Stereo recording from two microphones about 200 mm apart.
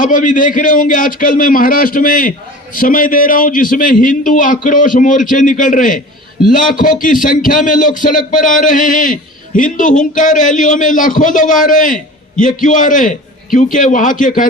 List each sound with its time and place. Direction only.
0.0 s a man's voice: 40° left (ahead or behind)